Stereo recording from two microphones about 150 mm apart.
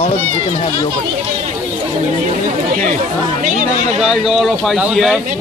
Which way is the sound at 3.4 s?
60° right (ahead or behind).